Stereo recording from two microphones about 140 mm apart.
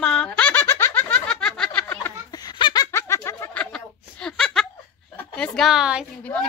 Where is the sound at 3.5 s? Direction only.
10° left (ahead or behind).